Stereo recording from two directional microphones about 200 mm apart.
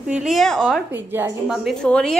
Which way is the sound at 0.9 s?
10° right (ahead or behind).